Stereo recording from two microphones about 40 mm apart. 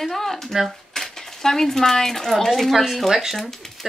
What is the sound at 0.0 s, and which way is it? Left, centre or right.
Speech, centre.